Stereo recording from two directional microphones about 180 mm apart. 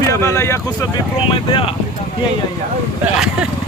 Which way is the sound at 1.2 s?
30° left (ahead or behind).